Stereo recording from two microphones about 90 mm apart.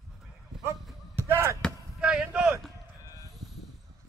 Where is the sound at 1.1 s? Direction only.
30° right (ahead or behind).